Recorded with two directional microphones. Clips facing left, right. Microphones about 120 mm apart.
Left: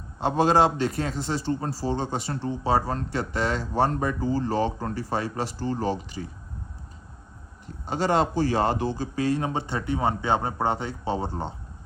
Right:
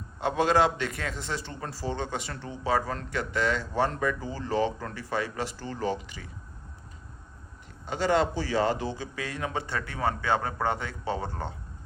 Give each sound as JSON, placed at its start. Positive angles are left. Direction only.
{"t": 0.2, "sound": "a man's voice", "side_deg": 35}
{"t": 7.9, "sound": "a man's voice", "side_deg": 40}